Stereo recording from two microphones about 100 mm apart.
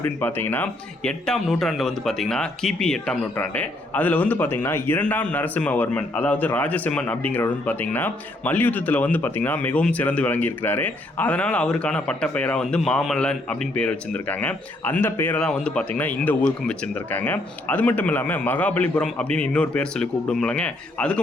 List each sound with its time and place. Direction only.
0.0 s speech: 20° left (ahead or behind)
1.0 s speech: 5° left (ahead or behind)
3.3 s a man's voice: 20° left (ahead or behind)